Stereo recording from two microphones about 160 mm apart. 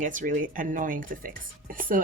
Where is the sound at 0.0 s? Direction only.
55° right (ahead or behind).